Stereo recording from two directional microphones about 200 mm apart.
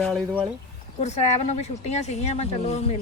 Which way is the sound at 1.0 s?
35° left (ahead or behind).